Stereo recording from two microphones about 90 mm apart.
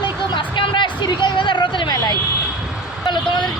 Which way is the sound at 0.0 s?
60° left (ahead or behind).